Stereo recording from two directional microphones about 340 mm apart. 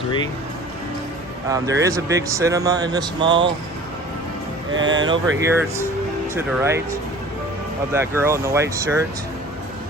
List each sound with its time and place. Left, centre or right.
1.5 s speech: centre
4.7 s speech: right
4.9 s speech: centre
7.9 s speech: centre